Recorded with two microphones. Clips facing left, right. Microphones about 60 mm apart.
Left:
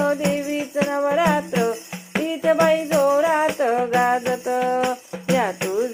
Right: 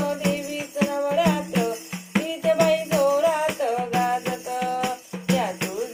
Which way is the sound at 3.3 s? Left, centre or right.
Left.